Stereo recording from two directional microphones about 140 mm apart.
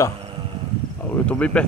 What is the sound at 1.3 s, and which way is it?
Speech, 10° left (ahead or behind).